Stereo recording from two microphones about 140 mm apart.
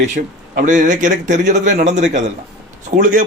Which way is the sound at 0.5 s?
65° right (ahead or behind).